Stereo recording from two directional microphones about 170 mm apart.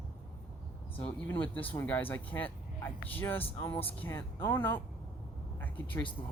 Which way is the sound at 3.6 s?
25° left (ahead or behind).